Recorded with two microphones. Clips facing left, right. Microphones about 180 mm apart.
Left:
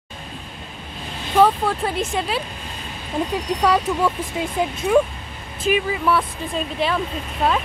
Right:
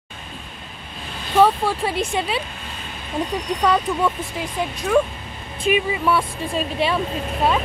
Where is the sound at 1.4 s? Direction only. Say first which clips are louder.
Even; 5° right (ahead or behind).